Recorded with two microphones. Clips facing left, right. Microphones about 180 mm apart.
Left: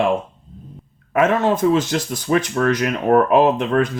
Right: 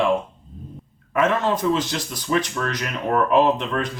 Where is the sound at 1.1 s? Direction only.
50° left (ahead or behind).